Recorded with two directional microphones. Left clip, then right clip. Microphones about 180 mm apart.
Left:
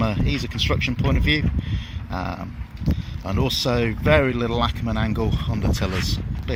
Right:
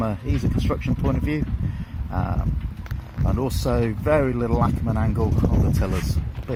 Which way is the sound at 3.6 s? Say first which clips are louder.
Even; 5° left (ahead or behind).